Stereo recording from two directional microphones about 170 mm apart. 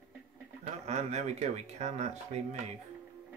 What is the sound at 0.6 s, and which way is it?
Speech, 40° right (ahead or behind).